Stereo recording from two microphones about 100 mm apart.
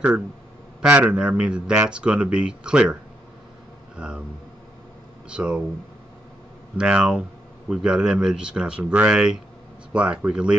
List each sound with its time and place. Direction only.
0.8 s speech: 10° right (ahead or behind)
5.3 s speech: 10° right (ahead or behind)
6.8 s speech: 10° right (ahead or behind)